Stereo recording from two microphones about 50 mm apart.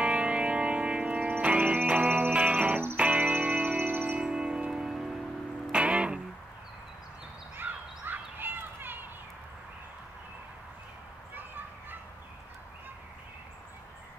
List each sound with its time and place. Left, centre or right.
0.0 s music: right
2.3 s music: right
4.2 s music: centre
5.7 s music: right
7.5 s a sound: right
11.3 s a sound: right